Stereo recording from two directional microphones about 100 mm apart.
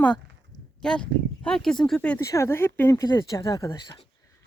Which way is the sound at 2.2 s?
30° left (ahead or behind).